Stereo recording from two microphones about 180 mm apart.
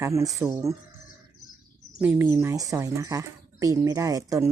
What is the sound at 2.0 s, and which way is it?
Speech, 10° right (ahead or behind).